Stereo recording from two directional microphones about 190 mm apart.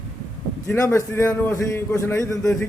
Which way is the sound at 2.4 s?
5° left (ahead or behind).